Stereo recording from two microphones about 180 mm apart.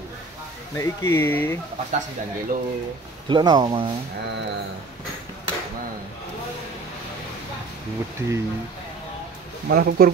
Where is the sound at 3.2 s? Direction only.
25° right (ahead or behind).